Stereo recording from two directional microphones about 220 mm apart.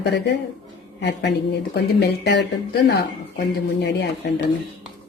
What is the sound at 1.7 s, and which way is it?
Speech, 50° left (ahead or behind).